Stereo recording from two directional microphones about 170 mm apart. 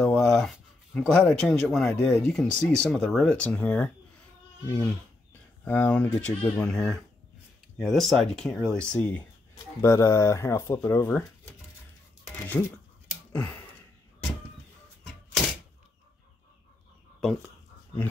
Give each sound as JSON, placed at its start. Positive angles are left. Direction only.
{"t": 0.0, "sound": "speech", "side_deg": 5}
{"t": 12.6, "sound": "speech", "side_deg": 10}
{"t": 13.3, "sound": "a sound", "side_deg": 10}